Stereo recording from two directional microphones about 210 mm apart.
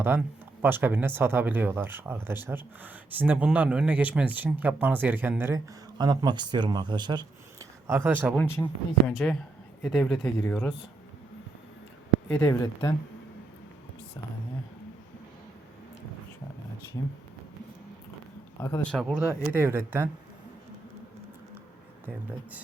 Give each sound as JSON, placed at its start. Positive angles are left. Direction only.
{"t": 0.0, "sound": "speech", "side_deg": -10}
{"t": 8.4, "sound": "speech", "side_deg": 10}
{"t": 12.3, "sound": "speech", "side_deg": 10}
{"t": 18.6, "sound": "speech", "side_deg": 10}
{"t": 19.3, "sound": "speech", "side_deg": -10}